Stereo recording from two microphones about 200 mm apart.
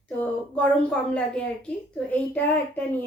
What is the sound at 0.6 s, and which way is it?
A woman's voice, 5° left (ahead or behind).